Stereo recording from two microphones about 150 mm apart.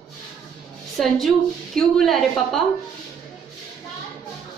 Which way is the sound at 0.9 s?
Centre (ahead or behind).